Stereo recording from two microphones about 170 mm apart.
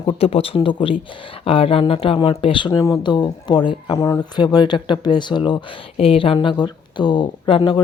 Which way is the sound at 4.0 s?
15° left (ahead or behind).